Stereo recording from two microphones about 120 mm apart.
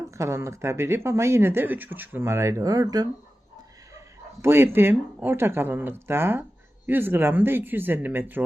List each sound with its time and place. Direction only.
0.0 s speech: 25° right (ahead or behind)
3.9 s speech: 20° right (ahead or behind)